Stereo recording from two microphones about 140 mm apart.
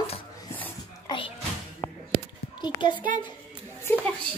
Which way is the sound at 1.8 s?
30° left (ahead or behind).